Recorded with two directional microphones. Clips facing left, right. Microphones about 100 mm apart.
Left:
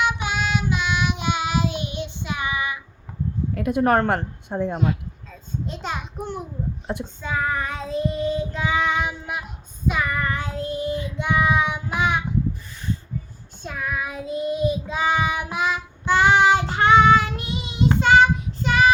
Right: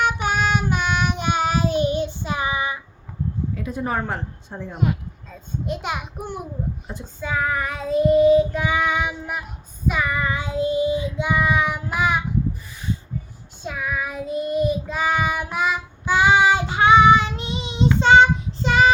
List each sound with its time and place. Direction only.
0.0 s child singing: 50° right (ahead or behind); by 2.8 s 30° right (ahead or behind)
3.5 s a woman's voice: 65° left (ahead or behind)
5.6 s a child's voice: 10° right (ahead or behind)
7.2 s child singing: 5° right (ahead or behind)
10.2 s child singing: 15° right (ahead or behind)
13.7 s child singing: 5° right (ahead or behind); by 18.9 s 30° right (ahead or behind)